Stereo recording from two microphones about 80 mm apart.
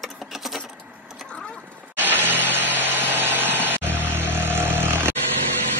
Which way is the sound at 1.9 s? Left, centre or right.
Right.